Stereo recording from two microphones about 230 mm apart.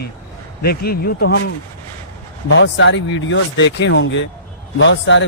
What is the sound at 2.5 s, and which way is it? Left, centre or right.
A man's voice, left.